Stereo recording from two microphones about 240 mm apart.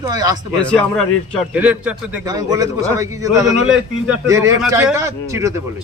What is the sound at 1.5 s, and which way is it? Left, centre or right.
A man's voice, centre.